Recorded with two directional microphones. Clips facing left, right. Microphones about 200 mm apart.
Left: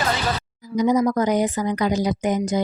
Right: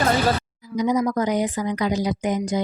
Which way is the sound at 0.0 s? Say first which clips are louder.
Right 4 dB; 50° right (ahead or behind).